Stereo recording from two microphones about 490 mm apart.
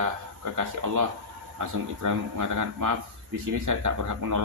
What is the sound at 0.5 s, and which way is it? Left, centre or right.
Speech, right.